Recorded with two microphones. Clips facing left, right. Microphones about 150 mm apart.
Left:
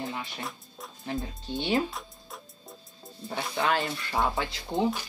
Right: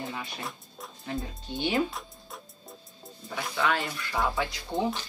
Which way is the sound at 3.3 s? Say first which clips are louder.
Left 1 dB; 30° left (ahead or behind).